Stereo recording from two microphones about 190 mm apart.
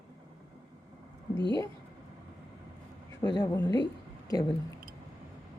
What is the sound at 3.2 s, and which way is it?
Speech, 20° left (ahead or behind).